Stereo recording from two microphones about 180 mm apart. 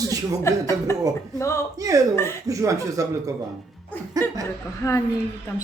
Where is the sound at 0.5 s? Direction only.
15° left (ahead or behind).